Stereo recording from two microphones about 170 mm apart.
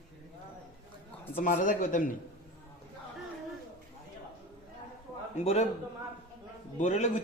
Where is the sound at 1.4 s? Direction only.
50° left (ahead or behind).